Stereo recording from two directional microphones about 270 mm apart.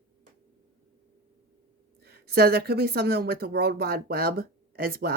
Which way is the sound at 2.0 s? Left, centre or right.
Right.